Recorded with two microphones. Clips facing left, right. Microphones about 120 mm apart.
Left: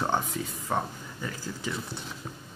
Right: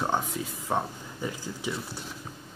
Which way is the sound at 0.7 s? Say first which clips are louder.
Right 1 dB; 10° right (ahead or behind).